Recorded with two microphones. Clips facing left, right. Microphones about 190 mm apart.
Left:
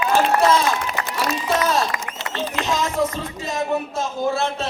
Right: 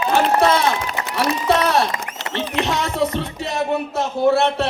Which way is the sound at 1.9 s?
25° right (ahead or behind).